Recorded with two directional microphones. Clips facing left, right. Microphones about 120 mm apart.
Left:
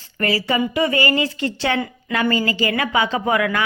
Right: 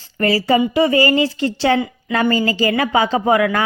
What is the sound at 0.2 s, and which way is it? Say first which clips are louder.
Speech: right 5 dB; 35° right (ahead or behind).